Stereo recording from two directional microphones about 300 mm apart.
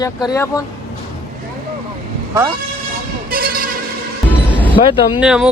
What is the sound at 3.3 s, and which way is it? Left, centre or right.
Vehicle, right.